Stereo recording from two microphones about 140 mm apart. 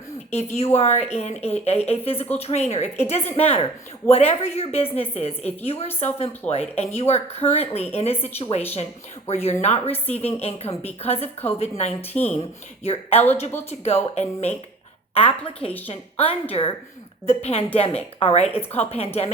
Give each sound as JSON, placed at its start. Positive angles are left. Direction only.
{"t": 0.3, "sound": "speech", "side_deg": 50}
{"t": 12.1, "sound": "speech", "side_deg": 10}
{"t": 12.8, "sound": "speech", "side_deg": 50}